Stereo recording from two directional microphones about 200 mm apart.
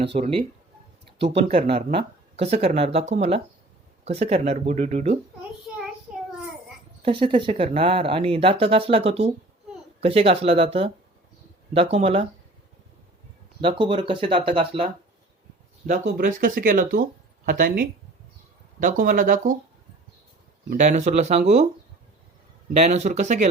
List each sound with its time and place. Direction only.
0.0 s speech: 30° right (ahead or behind)
1.4 s speech: 30° right (ahead or behind)
7.0 s speech: 25° right (ahead or behind)
13.6 s speech: 25° right (ahead or behind)
15.9 s speech: 45° right (ahead or behind)
20.7 s speech: 35° right (ahead or behind)
22.8 s speech: 35° right (ahead or behind)